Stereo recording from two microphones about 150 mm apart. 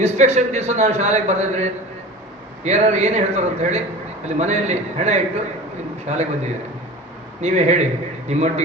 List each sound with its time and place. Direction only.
0.0 s a man's voice: 50° right (ahead or behind)